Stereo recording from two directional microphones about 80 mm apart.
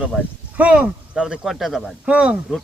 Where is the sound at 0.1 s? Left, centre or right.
Centre.